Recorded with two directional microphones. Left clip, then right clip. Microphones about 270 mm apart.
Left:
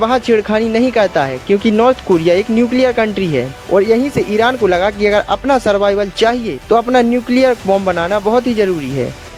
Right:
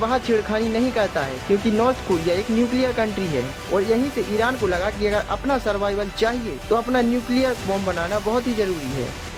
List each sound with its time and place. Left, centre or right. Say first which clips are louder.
0.0 s speech: left 8 dB; left